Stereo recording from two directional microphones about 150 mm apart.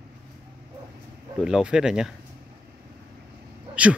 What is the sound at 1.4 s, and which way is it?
Speech, 5° right (ahead or behind).